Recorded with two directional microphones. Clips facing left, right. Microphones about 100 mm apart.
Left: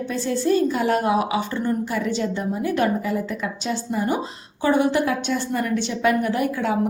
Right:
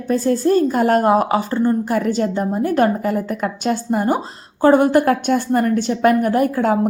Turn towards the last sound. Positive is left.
turn(degrees=-45)  # may be behind; listen again after turning